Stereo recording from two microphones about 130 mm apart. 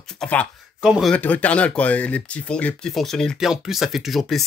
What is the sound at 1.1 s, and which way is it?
Speech, 10° left (ahead or behind).